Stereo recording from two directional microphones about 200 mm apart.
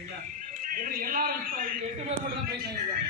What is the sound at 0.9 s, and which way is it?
Speech, 45° right (ahead or behind).